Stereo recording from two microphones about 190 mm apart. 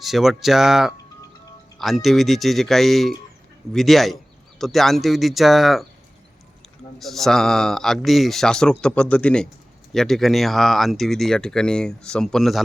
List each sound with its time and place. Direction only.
0.0 s speech: centre (ahead or behind)
7.0 s speech: centre (ahead or behind)